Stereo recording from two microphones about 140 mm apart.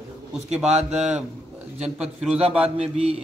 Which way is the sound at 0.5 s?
5° right (ahead or behind).